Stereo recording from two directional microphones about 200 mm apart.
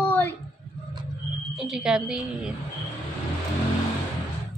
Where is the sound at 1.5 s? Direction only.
Centre (ahead or behind).